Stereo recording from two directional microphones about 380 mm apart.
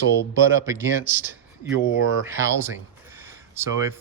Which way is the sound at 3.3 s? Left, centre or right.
Centre.